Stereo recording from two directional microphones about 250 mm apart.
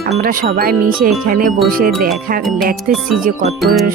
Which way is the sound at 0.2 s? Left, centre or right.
Right.